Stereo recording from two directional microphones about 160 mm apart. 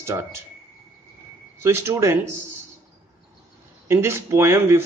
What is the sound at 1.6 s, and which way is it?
Speech, 15° right (ahead or behind).